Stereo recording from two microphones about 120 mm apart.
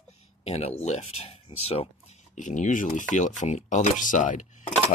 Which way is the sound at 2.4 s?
90° left.